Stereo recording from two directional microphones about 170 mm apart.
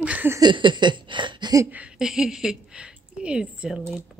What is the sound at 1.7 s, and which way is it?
Speech, 5° right (ahead or behind).